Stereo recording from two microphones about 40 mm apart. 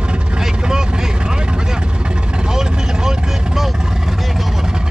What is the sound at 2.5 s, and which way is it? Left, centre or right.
Vehicle, centre.